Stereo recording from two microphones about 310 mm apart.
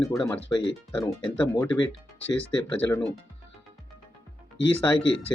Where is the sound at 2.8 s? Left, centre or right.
Centre.